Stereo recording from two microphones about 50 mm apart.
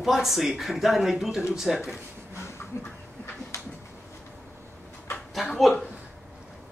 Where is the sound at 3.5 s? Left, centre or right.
Left.